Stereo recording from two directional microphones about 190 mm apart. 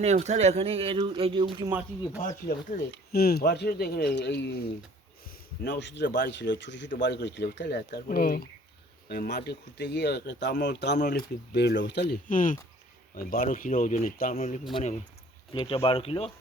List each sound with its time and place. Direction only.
0.0 s speech: 35° right (ahead or behind)
2.1 s speech: 45° left (ahead or behind)
2.9 s speech: 55° left (ahead or behind)
5.6 s speech: 65° left (ahead or behind)
12.3 s speech: 45° left (ahead or behind)
14.7 s speech: 30° left (ahead or behind)